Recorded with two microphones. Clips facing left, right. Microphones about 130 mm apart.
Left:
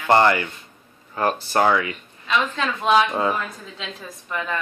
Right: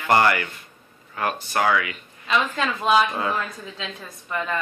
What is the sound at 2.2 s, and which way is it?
A woman's voice, 5° right (ahead or behind).